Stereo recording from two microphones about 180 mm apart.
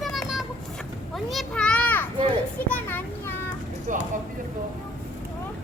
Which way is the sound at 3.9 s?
45° right (ahead or behind).